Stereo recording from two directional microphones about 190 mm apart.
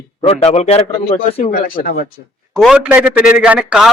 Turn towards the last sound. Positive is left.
turn(degrees=-5)  # may be behind; listen again after turning